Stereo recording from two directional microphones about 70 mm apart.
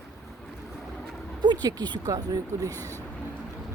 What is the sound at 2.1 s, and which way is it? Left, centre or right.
Speech, right.